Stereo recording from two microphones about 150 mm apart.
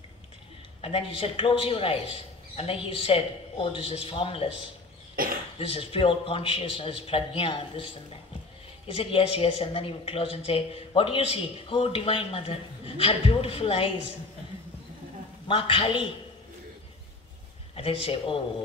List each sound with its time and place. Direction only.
0.7 s speech: 40° left (ahead or behind)
5.1 s cough: 75° right (ahead or behind)
5.6 s speech: 40° left (ahead or behind)
15.4 s speech: 35° left (ahead or behind)
17.7 s speech: 35° left (ahead or behind)